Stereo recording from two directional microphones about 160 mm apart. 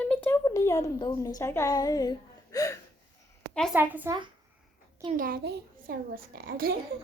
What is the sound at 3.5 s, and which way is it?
Speech, 5° left (ahead or behind).